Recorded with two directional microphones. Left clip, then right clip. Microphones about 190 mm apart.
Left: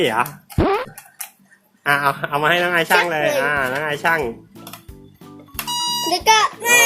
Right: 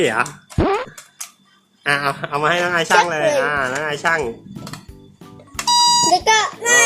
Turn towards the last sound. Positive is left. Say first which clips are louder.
# left 1 dB
turn(degrees=10)  # may be behind; listen again after turning